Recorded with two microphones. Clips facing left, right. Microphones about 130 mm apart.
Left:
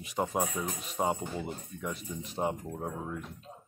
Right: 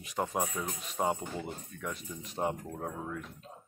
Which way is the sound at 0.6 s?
15° left (ahead or behind).